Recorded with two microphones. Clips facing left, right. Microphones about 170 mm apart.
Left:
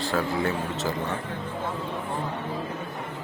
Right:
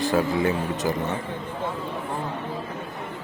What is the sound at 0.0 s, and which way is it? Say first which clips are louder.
Speech: right 4 dB; 20° right (ahead or behind).